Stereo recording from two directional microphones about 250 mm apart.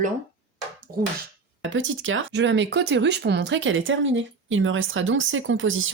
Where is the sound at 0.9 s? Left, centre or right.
Right.